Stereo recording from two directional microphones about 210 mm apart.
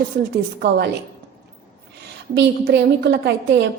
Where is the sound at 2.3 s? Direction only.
55° right (ahead or behind).